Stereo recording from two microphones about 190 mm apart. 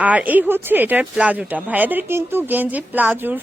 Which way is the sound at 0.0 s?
10° right (ahead or behind).